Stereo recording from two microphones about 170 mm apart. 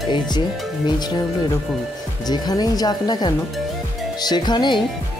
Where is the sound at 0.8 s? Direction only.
25° left (ahead or behind).